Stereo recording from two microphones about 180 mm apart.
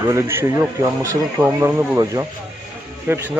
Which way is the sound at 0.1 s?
15° right (ahead or behind).